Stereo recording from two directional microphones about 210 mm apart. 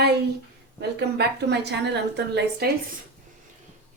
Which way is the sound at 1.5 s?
55° right (ahead or behind).